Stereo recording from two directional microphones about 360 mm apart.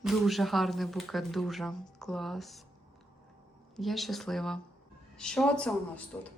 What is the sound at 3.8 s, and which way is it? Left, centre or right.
A woman's voice, centre.